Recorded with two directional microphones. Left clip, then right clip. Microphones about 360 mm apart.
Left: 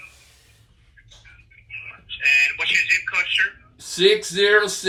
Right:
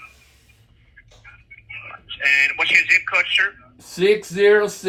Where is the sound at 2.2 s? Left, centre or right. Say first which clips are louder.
Right 1 dB; right.